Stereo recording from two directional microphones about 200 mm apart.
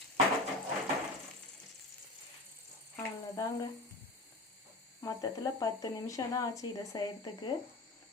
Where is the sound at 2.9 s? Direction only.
20° left (ahead or behind).